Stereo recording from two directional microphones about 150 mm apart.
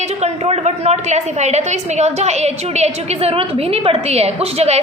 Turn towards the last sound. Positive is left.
turn(degrees=-45)  # may be behind; listen again after turning